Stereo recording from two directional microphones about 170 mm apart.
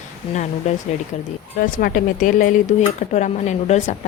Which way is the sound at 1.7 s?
50° left (ahead or behind).